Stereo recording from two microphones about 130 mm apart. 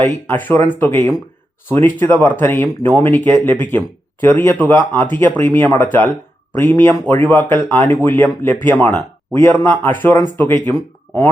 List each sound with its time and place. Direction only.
0.0 s speech: 15° left (ahead or behind)